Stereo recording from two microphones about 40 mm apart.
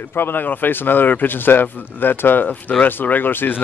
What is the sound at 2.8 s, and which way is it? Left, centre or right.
Speech, left.